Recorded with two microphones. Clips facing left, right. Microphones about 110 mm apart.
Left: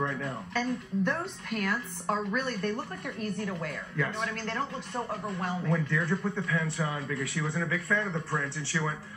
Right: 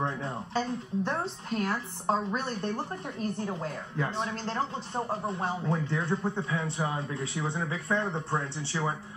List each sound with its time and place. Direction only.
0.0 s speech: 25° right (ahead or behind)